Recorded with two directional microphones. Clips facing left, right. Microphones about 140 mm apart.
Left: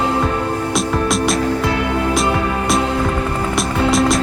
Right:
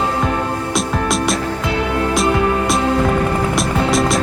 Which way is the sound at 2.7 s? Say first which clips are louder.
Right 2 dB; centre (ahead or behind).